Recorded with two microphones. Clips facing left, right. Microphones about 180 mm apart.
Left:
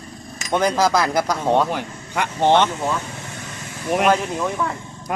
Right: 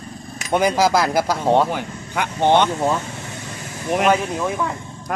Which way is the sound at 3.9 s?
5° right (ahead or behind).